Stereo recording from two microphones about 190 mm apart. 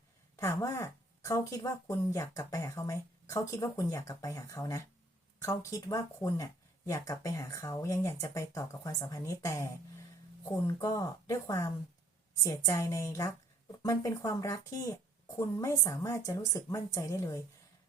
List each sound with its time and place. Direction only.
0.3 s speech: 15° left (ahead or behind)